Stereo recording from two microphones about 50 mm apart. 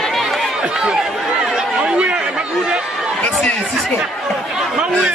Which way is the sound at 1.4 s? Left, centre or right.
Centre.